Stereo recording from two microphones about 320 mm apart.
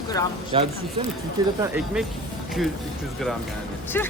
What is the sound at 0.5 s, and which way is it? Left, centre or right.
Speech, centre.